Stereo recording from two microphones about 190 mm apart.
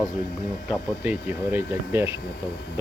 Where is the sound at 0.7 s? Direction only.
10° right (ahead or behind).